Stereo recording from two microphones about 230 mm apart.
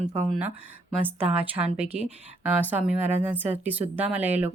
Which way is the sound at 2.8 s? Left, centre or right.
Centre.